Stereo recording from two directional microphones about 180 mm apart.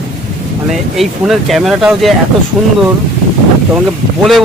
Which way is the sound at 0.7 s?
Centre (ahead or behind).